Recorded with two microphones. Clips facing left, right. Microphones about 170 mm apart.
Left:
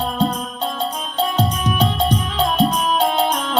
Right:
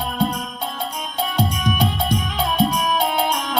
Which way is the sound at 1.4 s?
10° right (ahead or behind).